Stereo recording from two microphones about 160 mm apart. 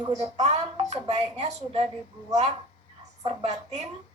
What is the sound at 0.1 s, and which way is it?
A woman's voice, 45° right (ahead or behind).